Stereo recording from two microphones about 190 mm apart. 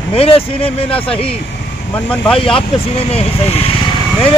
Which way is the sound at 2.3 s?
30° left (ahead or behind).